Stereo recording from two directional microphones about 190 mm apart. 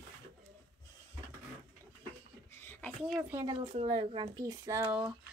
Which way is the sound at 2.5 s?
10° left (ahead or behind).